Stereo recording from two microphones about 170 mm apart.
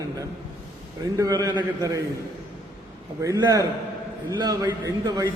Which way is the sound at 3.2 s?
20° right (ahead or behind).